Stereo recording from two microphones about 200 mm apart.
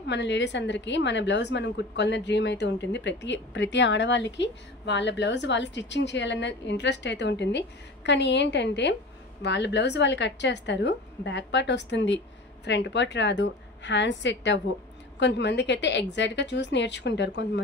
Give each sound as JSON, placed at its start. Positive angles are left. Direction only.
{"t": 0.0, "sound": "a woman's voice", "side_deg": 60}